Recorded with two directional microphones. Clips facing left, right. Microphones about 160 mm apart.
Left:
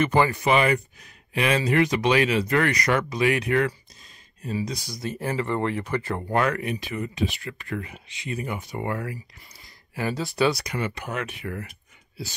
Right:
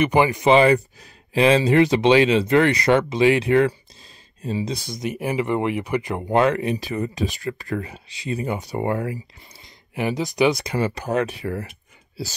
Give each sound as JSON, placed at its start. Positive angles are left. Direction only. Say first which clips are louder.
{"t": 0.0, "sound": "speech", "louder": "right 3 dB", "side_deg": -15}
{"t": 0.5, "sound": "speech", "louder": "right 6 dB", "side_deg": -30}
{"t": 4.9, "sound": "speech", "louder": "right 4 dB", "side_deg": -15}
{"t": 10.6, "sound": "speech", "louder": "right 6 dB", "side_deg": -30}